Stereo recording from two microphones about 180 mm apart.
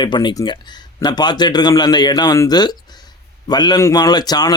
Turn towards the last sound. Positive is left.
turn(degrees=20)  # may be behind; listen again after turning